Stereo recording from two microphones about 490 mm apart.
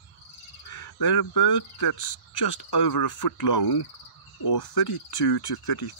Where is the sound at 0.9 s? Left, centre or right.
Left.